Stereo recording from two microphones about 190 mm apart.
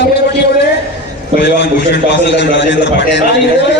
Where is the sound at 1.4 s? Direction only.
60° left (ahead or behind).